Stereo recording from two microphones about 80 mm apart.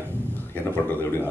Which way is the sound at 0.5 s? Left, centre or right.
Left.